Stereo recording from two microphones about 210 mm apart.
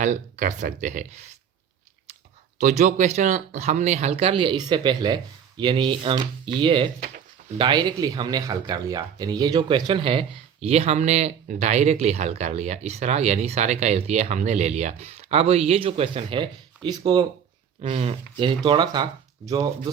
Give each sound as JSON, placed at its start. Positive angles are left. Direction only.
{"t": 0.0, "sound": "speech", "side_deg": -35}
{"t": 2.6, "sound": "speech", "side_deg": -35}